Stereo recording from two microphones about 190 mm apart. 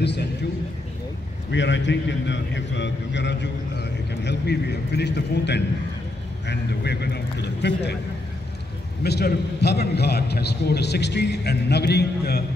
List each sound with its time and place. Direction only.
0.0 s a sound: 60° left (ahead or behind)
1.5 s a man's voice: 70° left (ahead or behind)
9.0 s a man's voice: 60° left (ahead or behind)